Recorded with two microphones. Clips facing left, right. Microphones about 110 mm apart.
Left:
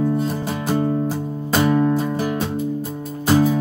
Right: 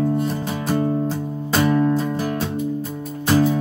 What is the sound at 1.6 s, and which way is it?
Music, 20° left (ahead or behind).